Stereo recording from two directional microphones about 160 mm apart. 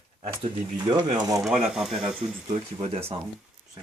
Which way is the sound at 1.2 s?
20° right (ahead or behind).